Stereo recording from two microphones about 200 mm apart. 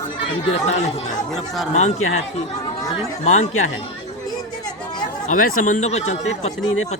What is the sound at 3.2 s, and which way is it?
Speech, 35° left (ahead or behind).